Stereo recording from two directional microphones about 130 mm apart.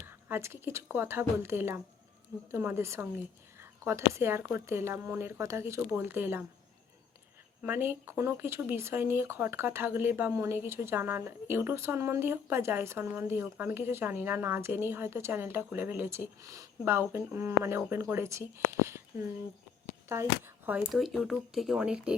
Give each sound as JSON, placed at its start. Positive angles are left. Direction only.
{"t": 0.0, "sound": "speech", "side_deg": -20}
{"t": 7.6, "sound": "speech", "side_deg": -15}
{"t": 20.7, "sound": "speech", "side_deg": -15}
{"t": 20.9, "sound": "speech", "side_deg": 0}